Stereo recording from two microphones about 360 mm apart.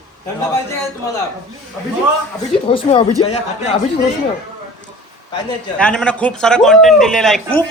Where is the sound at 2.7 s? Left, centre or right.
Centre.